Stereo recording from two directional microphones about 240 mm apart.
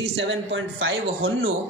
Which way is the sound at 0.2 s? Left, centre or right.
Right.